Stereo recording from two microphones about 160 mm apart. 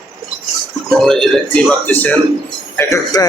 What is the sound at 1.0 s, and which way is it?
A man's voice, 5° left (ahead or behind).